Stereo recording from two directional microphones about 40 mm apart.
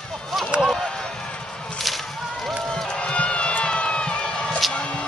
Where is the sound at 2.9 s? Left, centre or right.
Left.